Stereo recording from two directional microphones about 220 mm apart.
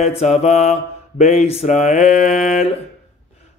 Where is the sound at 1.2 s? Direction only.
30° left (ahead or behind).